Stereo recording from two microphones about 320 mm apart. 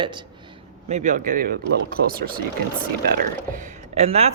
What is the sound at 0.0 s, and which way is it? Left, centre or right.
A man's voice, centre.